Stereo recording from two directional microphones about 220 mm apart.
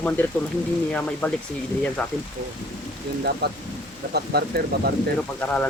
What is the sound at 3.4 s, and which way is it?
Speech, 45° right (ahead or behind).